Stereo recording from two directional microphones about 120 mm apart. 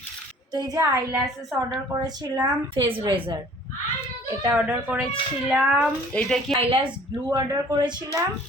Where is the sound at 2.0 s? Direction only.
35° right (ahead or behind).